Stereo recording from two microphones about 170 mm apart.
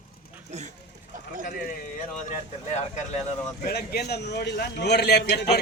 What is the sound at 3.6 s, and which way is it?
A man's voice, 65° left (ahead or behind).